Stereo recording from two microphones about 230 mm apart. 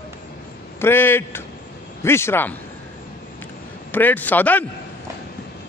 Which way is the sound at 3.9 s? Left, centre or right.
Centre.